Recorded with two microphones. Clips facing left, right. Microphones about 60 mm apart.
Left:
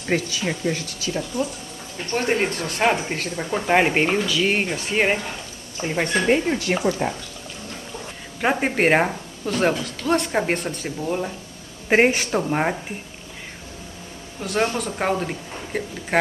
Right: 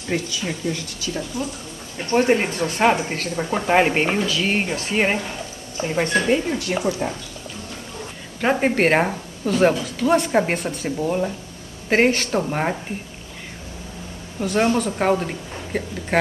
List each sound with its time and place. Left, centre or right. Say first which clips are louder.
0.1 s speech: left 2 dB; left
2.1 s a woman's voice: right 4 dB; centre
6.2 s speech: left 1 dB; left
8.4 s a woman's voice: right 2 dB; centre
11.9 s a woman's voice: even; centre
12.3 s a woman's voice: even; centre
14.4 s a woman's voice: right 4 dB; centre